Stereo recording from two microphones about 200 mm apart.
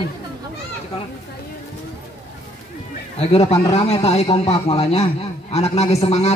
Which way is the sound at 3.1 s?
30° left (ahead or behind).